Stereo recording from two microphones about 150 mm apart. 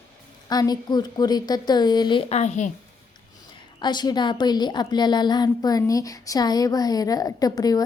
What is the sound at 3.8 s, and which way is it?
A woman's voice, 30° left (ahead or behind).